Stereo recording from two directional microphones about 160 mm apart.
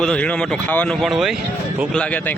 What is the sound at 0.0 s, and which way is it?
Speech, 5° left (ahead or behind).